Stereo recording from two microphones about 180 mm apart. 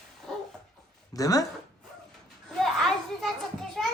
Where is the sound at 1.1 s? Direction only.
20° left (ahead or behind).